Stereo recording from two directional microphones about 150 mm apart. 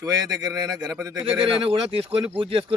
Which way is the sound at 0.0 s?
25° right (ahead or behind).